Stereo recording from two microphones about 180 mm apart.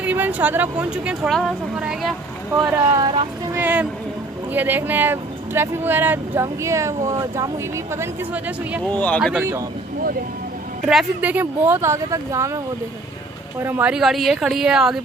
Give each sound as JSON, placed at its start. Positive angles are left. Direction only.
{"t": 0.0, "sound": "speech", "side_deg": -10}
{"t": 3.0, "sound": "speech", "side_deg": -25}
{"t": 3.5, "sound": "speech", "side_deg": -10}
{"t": 8.9, "sound": "speech", "side_deg": 10}
{"t": 10.9, "sound": "speech", "side_deg": -5}
{"t": 13.6, "sound": "speech", "side_deg": -10}